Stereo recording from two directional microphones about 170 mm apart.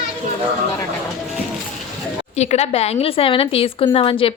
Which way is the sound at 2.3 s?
40° left (ahead or behind).